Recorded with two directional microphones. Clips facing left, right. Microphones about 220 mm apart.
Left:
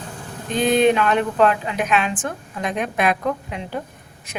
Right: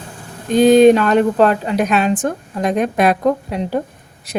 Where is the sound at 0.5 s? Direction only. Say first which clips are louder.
Right 8 dB; 40° right (ahead or behind).